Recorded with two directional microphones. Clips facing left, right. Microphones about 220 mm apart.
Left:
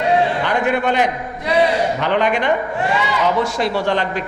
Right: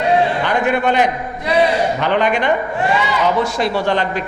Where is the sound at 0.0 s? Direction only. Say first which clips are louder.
Right 1 dB; 15° right (ahead or behind).